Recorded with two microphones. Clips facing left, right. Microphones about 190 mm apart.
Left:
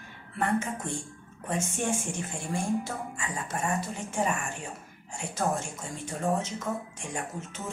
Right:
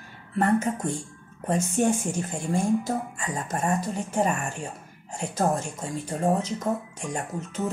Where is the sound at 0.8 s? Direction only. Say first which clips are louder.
Right 5 dB; 40° right (ahead or behind).